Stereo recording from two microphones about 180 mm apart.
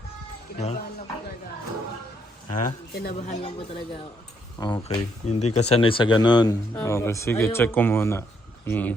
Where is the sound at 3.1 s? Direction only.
40° left (ahead or behind).